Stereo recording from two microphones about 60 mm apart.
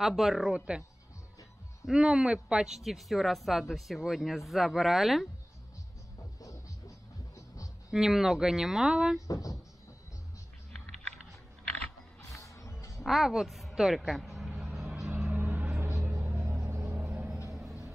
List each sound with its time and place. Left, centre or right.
0.0 s speech: centre
0.5 s speech: centre
1.9 s speech: centre
7.3 s music: left
7.9 s speech: centre
9.3 s speech: left
12.4 s music: left
13.0 s a woman's voice: centre
13.7 s vehicle: centre
15.2 s vehicle: right
16.3 s music: right
16.7 s vehicle: right
17.0 s vehicle: right